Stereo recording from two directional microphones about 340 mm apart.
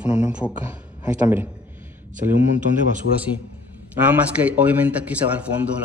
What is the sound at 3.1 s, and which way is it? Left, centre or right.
Speech, left.